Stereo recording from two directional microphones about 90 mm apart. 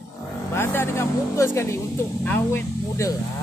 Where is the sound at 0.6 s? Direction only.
30° left (ahead or behind).